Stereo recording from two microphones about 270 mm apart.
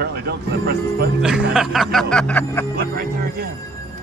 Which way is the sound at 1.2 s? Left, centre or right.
Centre.